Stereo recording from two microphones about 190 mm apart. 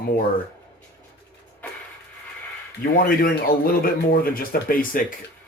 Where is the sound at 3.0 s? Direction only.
50° left (ahead or behind).